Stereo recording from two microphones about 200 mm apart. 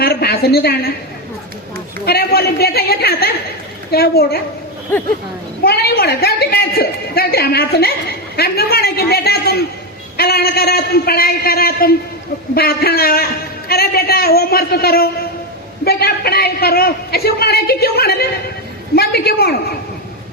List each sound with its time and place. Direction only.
0.0 s a woman's voice: 50° left (ahead or behind)
2.0 s a woman's voice: 50° left (ahead or behind)
4.9 s speech: 10° left (ahead or behind)
5.6 s a woman's voice: 50° left (ahead or behind)